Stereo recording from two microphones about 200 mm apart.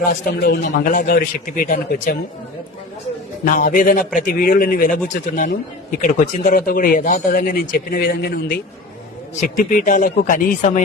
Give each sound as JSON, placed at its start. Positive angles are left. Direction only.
{"t": 0.0, "sound": "speech", "side_deg": 45}
{"t": 3.4, "sound": "speech", "side_deg": 40}
{"t": 6.0, "sound": "speech", "side_deg": 40}